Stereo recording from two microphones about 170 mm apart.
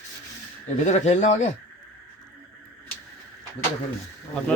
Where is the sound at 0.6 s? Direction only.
45° left (ahead or behind).